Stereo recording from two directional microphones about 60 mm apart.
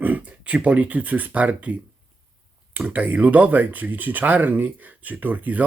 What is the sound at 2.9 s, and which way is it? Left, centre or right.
Speech, right.